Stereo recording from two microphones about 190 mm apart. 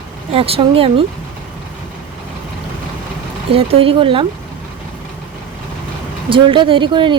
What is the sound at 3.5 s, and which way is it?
Speech, 30° right (ahead or behind).